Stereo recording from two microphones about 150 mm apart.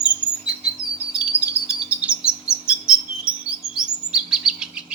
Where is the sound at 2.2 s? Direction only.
5° right (ahead or behind).